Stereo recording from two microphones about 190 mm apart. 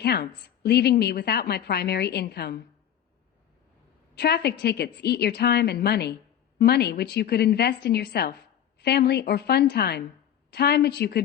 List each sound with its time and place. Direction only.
0.0 s a woman's voice: 60° left (ahead or behind)
4.1 s a woman's voice: 60° left (ahead or behind)